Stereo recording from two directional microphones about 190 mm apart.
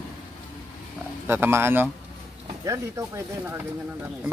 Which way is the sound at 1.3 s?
15° right (ahead or behind).